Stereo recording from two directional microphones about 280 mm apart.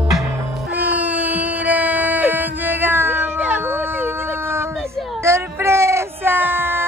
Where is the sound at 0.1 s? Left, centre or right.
Centre.